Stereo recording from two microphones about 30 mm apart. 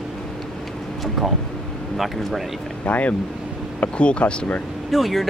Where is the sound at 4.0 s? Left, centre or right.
Left.